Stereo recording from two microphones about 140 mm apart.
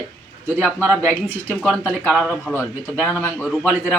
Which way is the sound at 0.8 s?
15° right (ahead or behind).